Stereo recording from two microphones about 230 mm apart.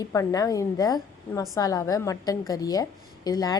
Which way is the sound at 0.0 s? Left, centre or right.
Centre.